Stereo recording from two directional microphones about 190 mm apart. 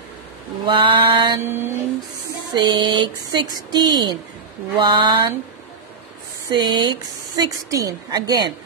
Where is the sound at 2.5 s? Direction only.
25° right (ahead or behind).